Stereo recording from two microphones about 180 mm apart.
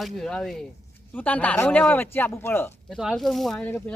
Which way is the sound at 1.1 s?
10° left (ahead or behind).